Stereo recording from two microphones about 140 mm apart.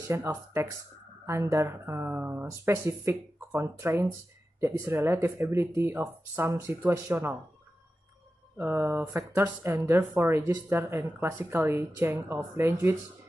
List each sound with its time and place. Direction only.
0.0 s speech: 20° right (ahead or behind)
8.5 s speech: 15° right (ahead or behind)